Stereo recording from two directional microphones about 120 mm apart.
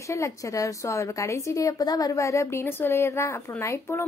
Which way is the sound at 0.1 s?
25° left (ahead or behind).